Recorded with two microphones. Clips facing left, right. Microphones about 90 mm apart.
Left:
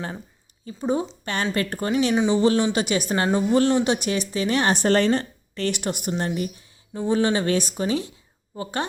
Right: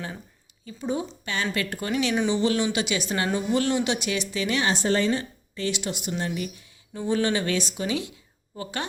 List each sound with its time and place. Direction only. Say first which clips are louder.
0.6 s a woman's voice: left 4 dB; 35° left (ahead or behind)
2.8 s speech: left 4 dB; 45° left (ahead or behind)
4.6 s a woman's voice: left 4 dB; 55° left (ahead or behind)
6.1 s speech: left 4 dB; 40° left (ahead or behind)